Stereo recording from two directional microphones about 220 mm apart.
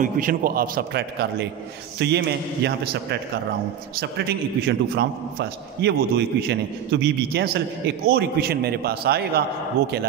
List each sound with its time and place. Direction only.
0.0 s a man's voice: 40° right (ahead or behind)